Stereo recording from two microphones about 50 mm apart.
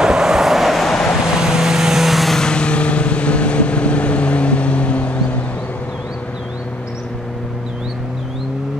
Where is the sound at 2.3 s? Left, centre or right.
Centre.